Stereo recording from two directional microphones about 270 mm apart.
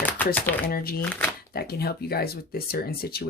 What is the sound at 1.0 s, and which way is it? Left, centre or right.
Speech, centre.